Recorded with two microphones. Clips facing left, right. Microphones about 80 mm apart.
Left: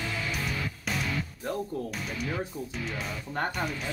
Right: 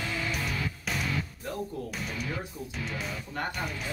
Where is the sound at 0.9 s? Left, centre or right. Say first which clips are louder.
Left 2 dB; centre.